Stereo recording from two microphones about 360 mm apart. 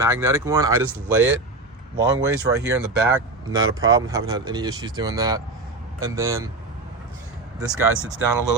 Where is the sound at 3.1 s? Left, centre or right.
Centre.